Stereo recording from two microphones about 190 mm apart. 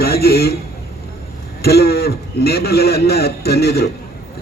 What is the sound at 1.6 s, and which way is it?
A man's voice, 55° left (ahead or behind).